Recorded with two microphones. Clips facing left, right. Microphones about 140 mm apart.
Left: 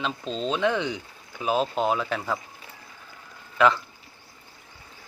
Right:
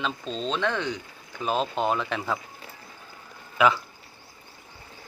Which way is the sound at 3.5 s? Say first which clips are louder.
Left 1 dB; 5° right (ahead or behind).